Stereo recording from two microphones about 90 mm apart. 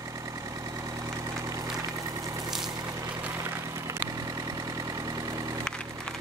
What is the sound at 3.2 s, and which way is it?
Vehicle, 30° right (ahead or behind).